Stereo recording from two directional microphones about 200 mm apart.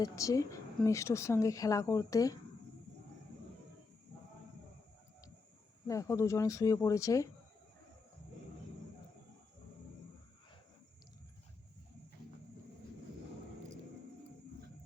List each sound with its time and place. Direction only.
0.0 s speech: 15° left (ahead or behind)
5.9 s speech: 15° left (ahead or behind)